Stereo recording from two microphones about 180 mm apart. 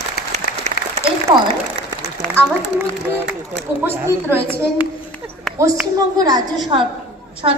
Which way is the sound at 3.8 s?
10° right (ahead or behind).